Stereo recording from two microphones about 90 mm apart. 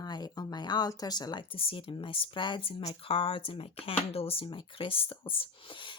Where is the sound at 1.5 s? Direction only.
85° left.